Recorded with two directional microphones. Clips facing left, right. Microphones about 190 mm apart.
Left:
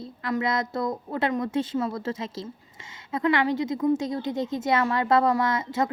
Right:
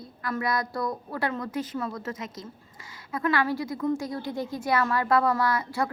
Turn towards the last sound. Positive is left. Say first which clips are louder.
# left 1 dB
turn(degrees=20)  # may be behind; listen again after turning